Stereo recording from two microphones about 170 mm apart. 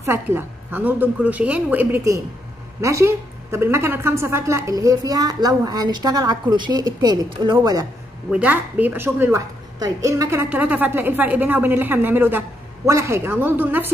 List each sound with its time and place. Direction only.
0.0 s a woman's voice: 15° right (ahead or behind)
8.3 s a woman's voice: 10° right (ahead or behind)